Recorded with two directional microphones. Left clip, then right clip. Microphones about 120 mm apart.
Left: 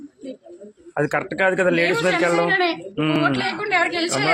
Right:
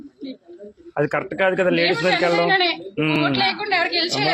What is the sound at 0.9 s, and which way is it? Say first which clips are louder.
Speech: even; 10° left (ahead or behind).